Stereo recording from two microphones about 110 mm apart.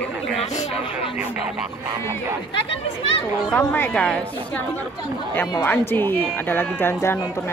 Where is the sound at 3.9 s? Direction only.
10° left (ahead or behind).